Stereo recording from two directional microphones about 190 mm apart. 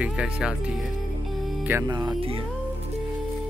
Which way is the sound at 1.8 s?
25° right (ahead or behind).